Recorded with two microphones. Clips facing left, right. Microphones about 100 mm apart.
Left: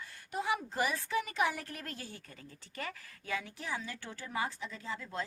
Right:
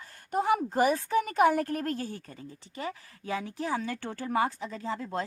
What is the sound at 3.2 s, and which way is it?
Speech, 35° right (ahead or behind).